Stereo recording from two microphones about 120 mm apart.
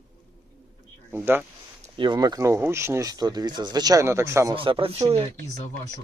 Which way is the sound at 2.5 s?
20° right (ahead or behind).